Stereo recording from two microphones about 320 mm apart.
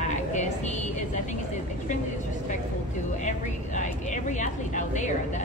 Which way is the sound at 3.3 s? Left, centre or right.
Left.